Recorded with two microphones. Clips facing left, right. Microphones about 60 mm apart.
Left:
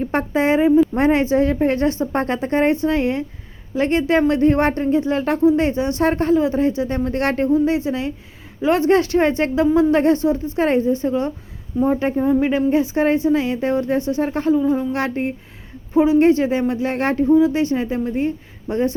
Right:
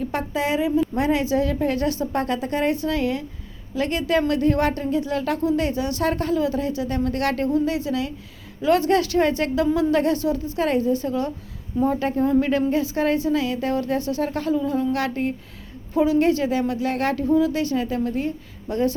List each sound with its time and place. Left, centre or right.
0.0 s a woman's voice: left